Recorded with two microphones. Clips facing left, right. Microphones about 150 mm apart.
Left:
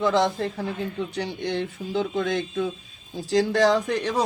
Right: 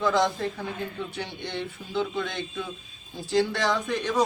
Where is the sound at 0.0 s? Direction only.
30° left (ahead or behind).